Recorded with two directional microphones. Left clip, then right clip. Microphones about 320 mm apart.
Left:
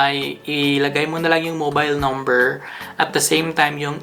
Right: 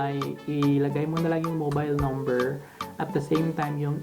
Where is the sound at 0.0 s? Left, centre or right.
Centre.